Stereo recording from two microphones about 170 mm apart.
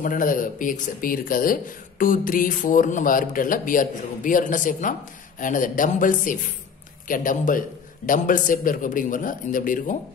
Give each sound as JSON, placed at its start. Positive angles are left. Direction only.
{"t": 0.0, "sound": "speech", "side_deg": 55}